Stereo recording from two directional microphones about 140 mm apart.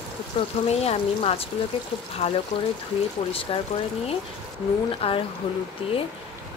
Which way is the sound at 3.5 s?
40° left (ahead or behind).